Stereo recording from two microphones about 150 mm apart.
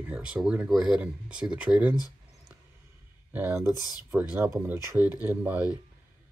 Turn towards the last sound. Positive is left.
turn(degrees=-10)  # may be behind; listen again after turning